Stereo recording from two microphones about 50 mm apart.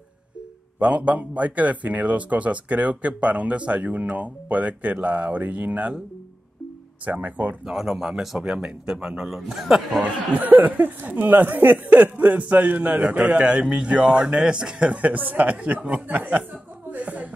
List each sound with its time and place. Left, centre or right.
0.7 s a man's voice: right
7.1 s speech: right
7.7 s speech: centre
10.3 s speech: right; by 15.0 s centre
15.0 s speech: right
16.9 s music: right